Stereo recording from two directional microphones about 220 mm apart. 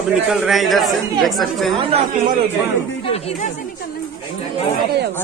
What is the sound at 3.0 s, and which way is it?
Speech, 25° left (ahead or behind).